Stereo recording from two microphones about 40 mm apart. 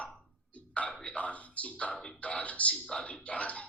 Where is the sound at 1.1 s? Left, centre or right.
Left.